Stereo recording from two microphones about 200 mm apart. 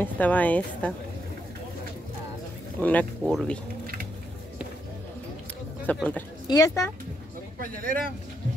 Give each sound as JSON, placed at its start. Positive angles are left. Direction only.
{"t": 0.0, "sound": "a woman's voice", "side_deg": 10}
{"t": 2.8, "sound": "speech", "side_deg": 5}
{"t": 3.8, "sound": "a sound", "side_deg": -45}
{"t": 5.9, "sound": "a woman's voice", "side_deg": 10}
{"t": 7.5, "sound": "speech", "side_deg": -45}